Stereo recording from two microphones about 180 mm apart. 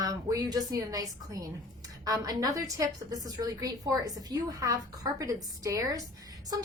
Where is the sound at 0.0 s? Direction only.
20° right (ahead or behind).